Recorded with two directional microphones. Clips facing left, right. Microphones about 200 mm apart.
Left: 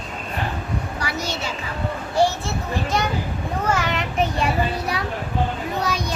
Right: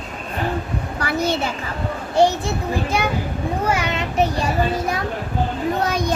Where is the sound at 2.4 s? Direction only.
10° right (ahead or behind).